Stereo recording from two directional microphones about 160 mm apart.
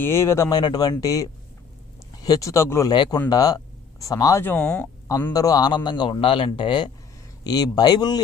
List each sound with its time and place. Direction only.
0.0 s a man's voice: 15° left (ahead or behind)
2.9 s a man's voice: 30° left (ahead or behind); by 4.9 s 5° left (ahead or behind)
5.3 s a man's voice: 25° left (ahead or behind)